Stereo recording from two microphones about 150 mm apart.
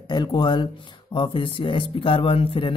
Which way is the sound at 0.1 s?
30° left (ahead or behind).